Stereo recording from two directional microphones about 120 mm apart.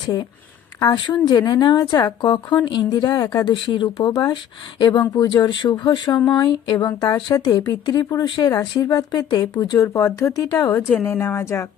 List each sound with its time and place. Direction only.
0.8 s a woman's voice: 35° left (ahead or behind)